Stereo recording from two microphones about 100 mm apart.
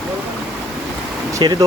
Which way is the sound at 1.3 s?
45° right (ahead or behind).